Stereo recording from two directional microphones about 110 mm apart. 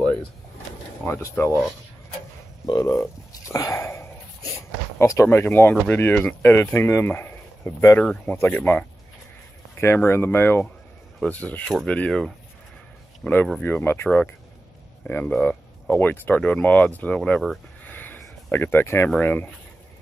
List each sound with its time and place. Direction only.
1.0 s speech: 25° left (ahead or behind)
2.6 s a sound: 35° left (ahead or behind)
4.9 s speech: 25° left (ahead or behind)
8.0 s speech: 10° left (ahead or behind)
17.8 s a sound: 15° left (ahead or behind)
19.0 s speech: 15° left (ahead or behind)